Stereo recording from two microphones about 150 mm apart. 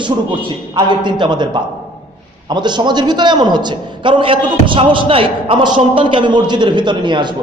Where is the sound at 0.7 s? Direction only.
30° right (ahead or behind).